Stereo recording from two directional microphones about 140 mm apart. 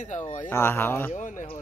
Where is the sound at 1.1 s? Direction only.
65° left (ahead or behind).